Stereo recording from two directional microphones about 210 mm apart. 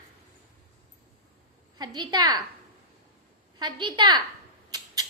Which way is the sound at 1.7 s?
20° right (ahead or behind).